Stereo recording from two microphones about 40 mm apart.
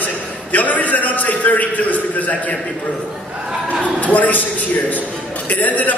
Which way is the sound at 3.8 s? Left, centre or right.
Left.